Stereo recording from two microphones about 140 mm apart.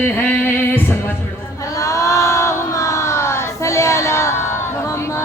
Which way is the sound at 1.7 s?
25° left (ahead or behind).